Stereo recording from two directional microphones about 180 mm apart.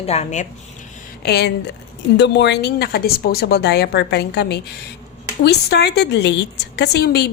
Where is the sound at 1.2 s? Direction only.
65° left (ahead or behind).